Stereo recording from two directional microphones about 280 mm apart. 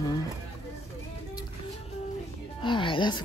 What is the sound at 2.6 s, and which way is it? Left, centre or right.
Speech, centre.